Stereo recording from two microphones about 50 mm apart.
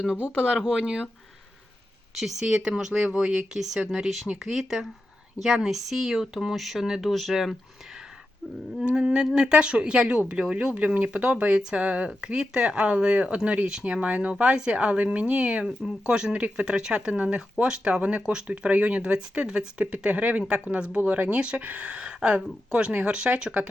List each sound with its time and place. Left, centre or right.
0.8 s speech: centre
2.4 s speech: centre
8.8 s speech: right
10.8 s speech: right
13.9 s speech: right